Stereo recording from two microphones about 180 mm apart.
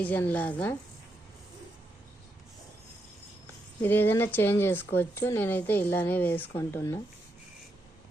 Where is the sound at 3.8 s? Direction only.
10° left (ahead or behind).